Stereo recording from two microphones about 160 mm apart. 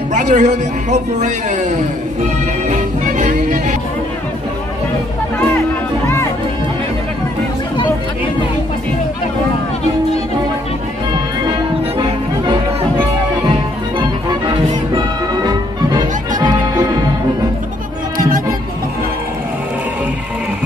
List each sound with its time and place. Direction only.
0.1 s a man's voice: 50° right (ahead or behind)
2.7 s music: 50° right (ahead or behind)
13.9 s music: 30° right (ahead or behind)
18.1 s music: 60° right (ahead or behind)